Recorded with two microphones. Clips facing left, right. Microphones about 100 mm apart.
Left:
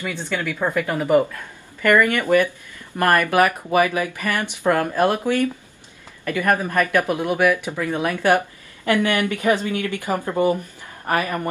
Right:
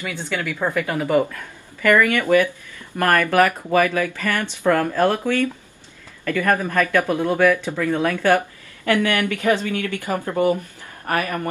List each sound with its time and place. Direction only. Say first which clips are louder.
0.0 s speech: left 1 dB; 15° left (ahead or behind)